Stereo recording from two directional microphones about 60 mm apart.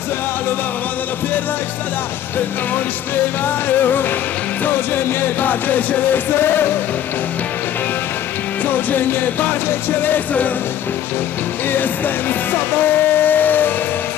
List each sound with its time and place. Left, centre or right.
3.4 s music: left
8.6 s music: left
11.7 s music: left